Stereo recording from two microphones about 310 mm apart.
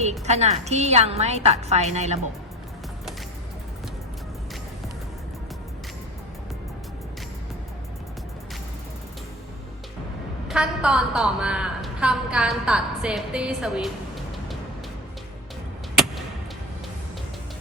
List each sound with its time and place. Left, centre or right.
0.3 s a woman's voice: right
10.5 s a woman's voice: centre